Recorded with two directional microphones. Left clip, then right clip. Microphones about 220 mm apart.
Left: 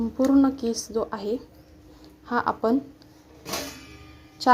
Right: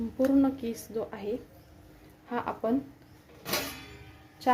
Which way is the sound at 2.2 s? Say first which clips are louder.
Left 8 dB; 30° left (ahead or behind).